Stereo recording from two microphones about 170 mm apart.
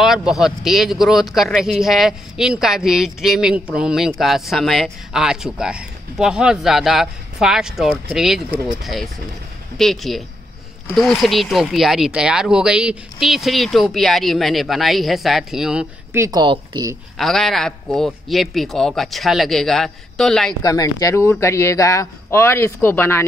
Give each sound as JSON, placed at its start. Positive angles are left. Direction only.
{"t": 0.0, "sound": "speech", "side_deg": 0}
{"t": 16.2, "sound": "speech", "side_deg": -25}
{"t": 17.2, "sound": "speech", "side_deg": 0}
{"t": 20.6, "sound": "speech", "side_deg": 20}